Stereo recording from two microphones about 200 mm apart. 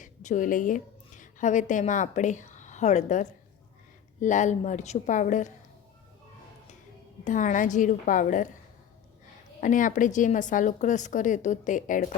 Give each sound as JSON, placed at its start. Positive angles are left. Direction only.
{"t": 0.0, "sound": "a woman's voice", "side_deg": 40}
{"t": 7.3, "sound": "a woman's voice", "side_deg": 40}
{"t": 9.6, "sound": "a woman's voice", "side_deg": 40}